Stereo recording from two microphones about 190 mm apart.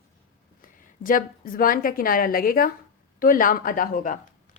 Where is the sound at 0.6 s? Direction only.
45° left (ahead or behind).